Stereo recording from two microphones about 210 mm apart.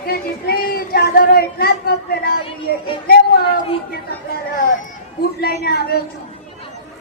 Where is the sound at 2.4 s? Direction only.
25° left (ahead or behind).